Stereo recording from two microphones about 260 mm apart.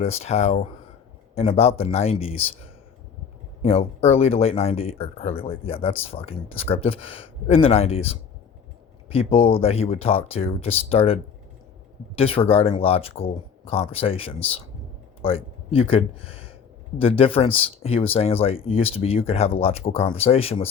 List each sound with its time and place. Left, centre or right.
0.0 s speech: left
3.6 s speech: left